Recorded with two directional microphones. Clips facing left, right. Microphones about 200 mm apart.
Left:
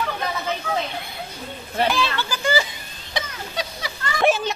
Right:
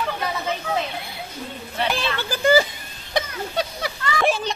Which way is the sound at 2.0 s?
55° right (ahead or behind).